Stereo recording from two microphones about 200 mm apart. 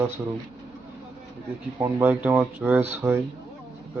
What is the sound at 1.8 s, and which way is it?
Speech, 10° right (ahead or behind).